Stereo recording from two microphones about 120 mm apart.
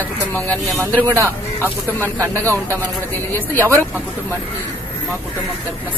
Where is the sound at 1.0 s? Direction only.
20° right (ahead or behind).